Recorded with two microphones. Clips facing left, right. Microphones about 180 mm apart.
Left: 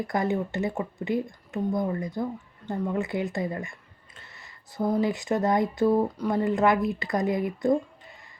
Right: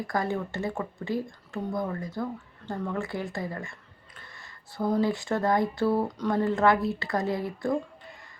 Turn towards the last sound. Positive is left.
turn(degrees=20)  # may be behind; listen again after turning